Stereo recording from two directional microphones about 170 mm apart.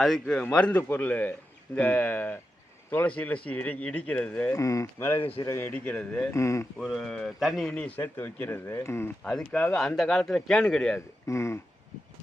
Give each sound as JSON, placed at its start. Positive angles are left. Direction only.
{"t": 0.0, "sound": "speech", "side_deg": 5}
{"t": 6.3, "sound": "speech", "side_deg": 15}
{"t": 6.7, "sound": "speech", "side_deg": 0}
{"t": 11.3, "sound": "speech", "side_deg": 15}